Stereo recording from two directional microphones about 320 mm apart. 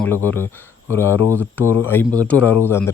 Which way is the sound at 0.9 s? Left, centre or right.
Centre.